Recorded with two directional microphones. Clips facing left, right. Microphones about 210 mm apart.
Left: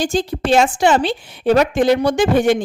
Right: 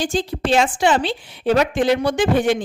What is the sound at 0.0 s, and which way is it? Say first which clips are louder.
A woman's voice: left 3 dB; 45° left (ahead or behind).